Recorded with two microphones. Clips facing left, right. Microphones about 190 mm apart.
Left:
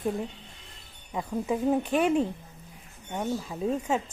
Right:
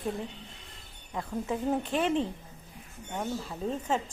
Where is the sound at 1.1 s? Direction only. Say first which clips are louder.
Left 4 dB; 15° left (ahead or behind).